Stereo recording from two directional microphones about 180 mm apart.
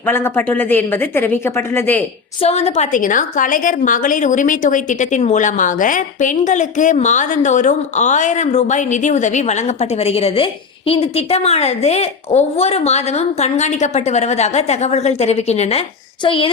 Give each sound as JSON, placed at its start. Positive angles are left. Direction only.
{"t": 0.0, "sound": "a woman's voice", "side_deg": 10}
{"t": 2.4, "sound": "a woman's voice", "side_deg": 35}
{"t": 16.2, "sound": "child singing", "side_deg": 30}